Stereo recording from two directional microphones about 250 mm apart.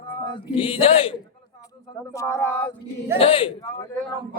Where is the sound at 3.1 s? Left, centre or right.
Left.